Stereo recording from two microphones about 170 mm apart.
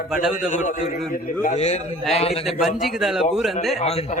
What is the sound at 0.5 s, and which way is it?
A man's voice, 50° left (ahead or behind).